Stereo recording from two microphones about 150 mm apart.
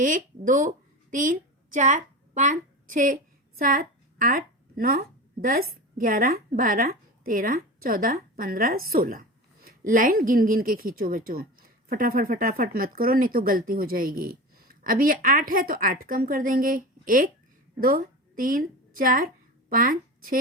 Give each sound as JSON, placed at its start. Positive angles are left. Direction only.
{"t": 0.0, "sound": "a woman's voice", "side_deg": -60}